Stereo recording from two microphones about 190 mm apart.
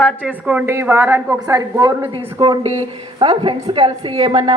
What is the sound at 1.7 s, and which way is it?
A woman's voice, 25° right (ahead or behind).